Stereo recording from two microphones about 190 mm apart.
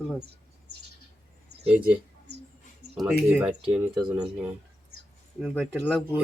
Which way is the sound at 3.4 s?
5° right (ahead or behind).